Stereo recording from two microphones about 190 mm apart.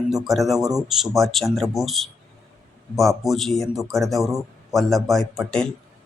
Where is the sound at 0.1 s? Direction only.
Centre (ahead or behind).